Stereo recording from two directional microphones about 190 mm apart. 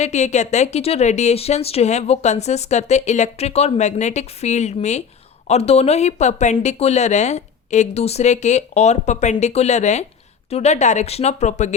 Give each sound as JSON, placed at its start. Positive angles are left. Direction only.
{"t": 0.0, "sound": "speech", "side_deg": 35}